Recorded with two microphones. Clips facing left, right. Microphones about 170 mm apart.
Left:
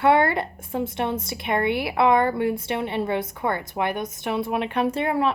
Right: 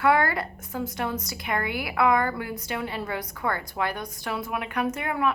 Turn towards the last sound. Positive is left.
turn(degrees=30)  # may be behind; listen again after turning